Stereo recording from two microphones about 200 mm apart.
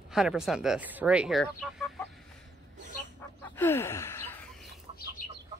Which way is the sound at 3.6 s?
10° left (ahead or behind).